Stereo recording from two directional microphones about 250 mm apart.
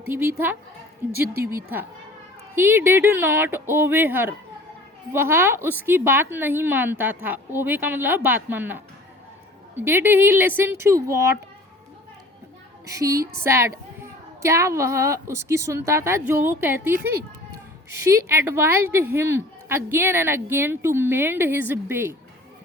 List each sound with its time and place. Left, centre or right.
0.1 s a woman's voice: centre
12.8 s a woman's voice: centre
17.0 s speech: right
18.0 s a woman's voice: centre